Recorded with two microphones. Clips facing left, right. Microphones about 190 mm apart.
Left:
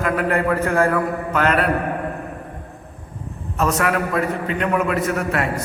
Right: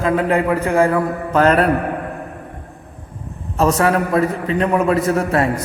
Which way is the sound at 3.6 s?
30° right (ahead or behind).